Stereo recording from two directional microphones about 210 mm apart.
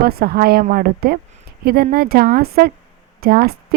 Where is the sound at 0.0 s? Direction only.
45° right (ahead or behind).